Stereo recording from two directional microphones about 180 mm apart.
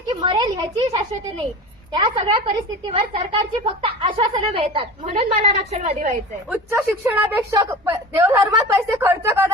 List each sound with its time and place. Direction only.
0.2 s a woman's voice: 20° right (ahead or behind); by 6.1 s 45° right (ahead or behind)
6.5 s a woman's voice: 10° right (ahead or behind)